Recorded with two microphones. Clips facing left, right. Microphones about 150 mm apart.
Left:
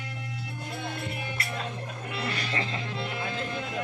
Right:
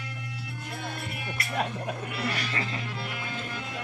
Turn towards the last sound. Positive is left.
turn(degrees=25)  # may be behind; listen again after turning